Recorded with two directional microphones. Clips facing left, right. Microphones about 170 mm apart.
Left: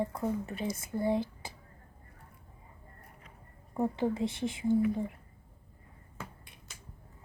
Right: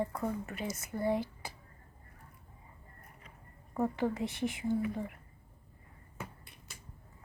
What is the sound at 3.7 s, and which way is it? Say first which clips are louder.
A woman's voice: left 2 dB; 20° left (ahead or behind).